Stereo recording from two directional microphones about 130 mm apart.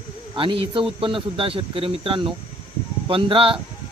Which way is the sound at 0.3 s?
40° right (ahead or behind).